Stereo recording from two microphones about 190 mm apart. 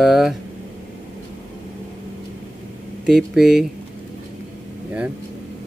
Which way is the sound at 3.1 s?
Centre (ahead or behind).